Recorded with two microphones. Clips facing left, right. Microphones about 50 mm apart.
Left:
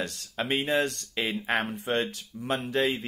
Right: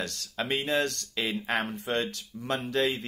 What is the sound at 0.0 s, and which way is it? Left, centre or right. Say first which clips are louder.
Speech: left 1 dB; centre.